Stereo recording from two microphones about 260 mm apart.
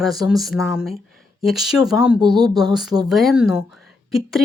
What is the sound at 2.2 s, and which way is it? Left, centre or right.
Speech, centre.